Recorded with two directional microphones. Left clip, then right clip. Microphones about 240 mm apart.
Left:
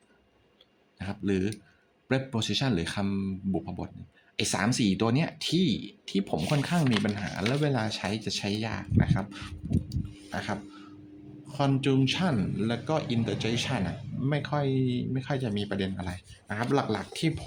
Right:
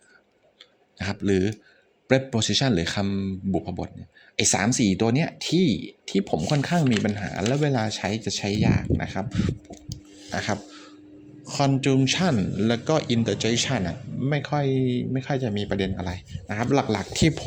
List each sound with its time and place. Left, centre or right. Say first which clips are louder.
0.9 s a man's voice: right 7 dB; right
10.2 s filing: right 7 dB; right
11.4 s a man's voice: right 5 dB; right